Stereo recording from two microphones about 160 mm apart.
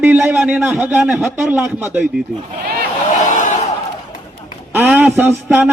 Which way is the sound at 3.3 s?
50° left (ahead or behind).